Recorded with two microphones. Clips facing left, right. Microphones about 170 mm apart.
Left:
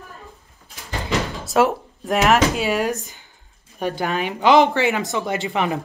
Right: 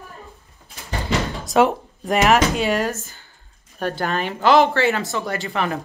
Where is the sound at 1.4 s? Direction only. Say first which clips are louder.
Right 1 dB; centre (ahead or behind).